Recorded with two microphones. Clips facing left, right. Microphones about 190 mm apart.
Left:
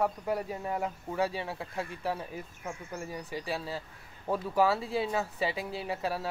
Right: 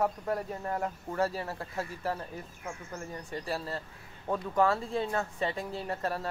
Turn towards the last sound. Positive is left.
turn(degrees=5)  # may be behind; listen again after turning